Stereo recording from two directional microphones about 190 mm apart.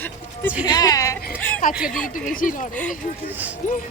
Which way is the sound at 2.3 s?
45° left (ahead or behind).